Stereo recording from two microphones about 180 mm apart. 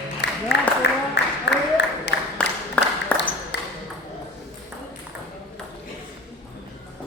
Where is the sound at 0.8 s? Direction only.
75° left (ahead or behind).